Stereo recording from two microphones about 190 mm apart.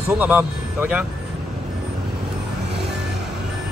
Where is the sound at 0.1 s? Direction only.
10° right (ahead or behind).